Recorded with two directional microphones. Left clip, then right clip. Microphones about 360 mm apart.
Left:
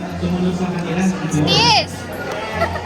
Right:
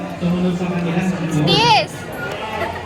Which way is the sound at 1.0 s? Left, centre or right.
Centre.